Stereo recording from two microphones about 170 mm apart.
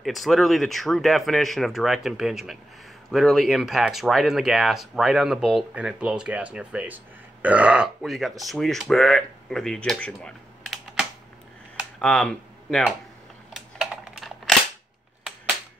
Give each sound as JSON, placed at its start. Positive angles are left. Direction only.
{"t": 0.0, "sound": "speech", "side_deg": 0}
{"t": 13.7, "sound": "typing", "side_deg": 0}